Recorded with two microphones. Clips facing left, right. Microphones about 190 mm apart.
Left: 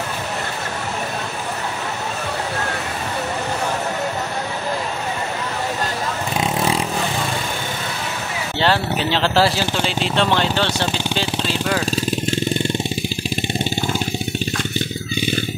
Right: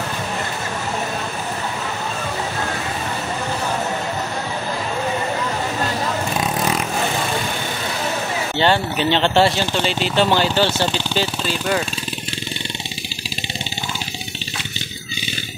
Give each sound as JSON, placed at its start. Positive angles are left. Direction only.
{"t": 8.5, "sound": "speech", "side_deg": 0}
{"t": 11.9, "sound": "vehicle", "side_deg": 45}